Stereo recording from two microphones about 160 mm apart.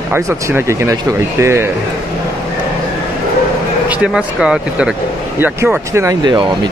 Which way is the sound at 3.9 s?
5° right (ahead or behind).